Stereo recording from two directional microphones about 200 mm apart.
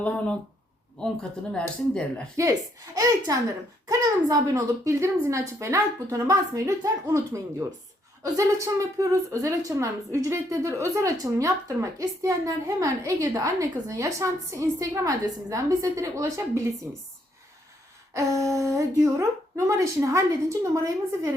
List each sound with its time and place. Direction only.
0.0 s speech: 5° left (ahead or behind)
2.3 s a woman's voice: 15° right (ahead or behind)
18.1 s a woman's voice: 15° right (ahead or behind)